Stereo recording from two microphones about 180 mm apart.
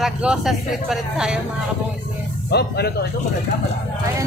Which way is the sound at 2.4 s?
65° left (ahead or behind).